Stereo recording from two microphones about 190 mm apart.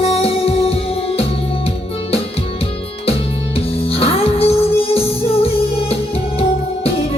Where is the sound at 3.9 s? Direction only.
30° left (ahead or behind).